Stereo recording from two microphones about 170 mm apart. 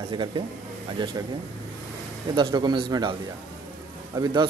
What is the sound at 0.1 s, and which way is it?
A man's voice, 30° right (ahead or behind).